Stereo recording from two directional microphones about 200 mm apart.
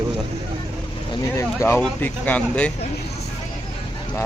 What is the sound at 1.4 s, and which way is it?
Speech, 10° left (ahead or behind).